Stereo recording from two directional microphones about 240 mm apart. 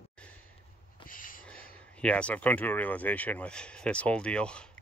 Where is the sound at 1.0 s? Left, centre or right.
Left.